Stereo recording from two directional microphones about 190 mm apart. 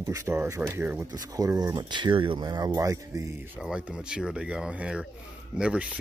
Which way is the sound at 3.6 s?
5° right (ahead or behind).